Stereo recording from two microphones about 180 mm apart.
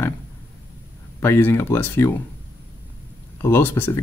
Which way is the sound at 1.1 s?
15° left (ahead or behind).